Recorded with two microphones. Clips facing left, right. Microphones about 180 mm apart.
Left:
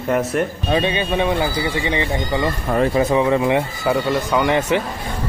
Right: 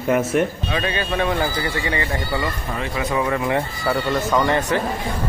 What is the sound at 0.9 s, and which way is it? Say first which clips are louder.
Speech: left 3 dB; 20° left (ahead or behind).